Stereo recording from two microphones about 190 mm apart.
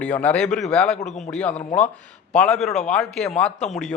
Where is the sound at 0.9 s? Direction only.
35° left (ahead or behind).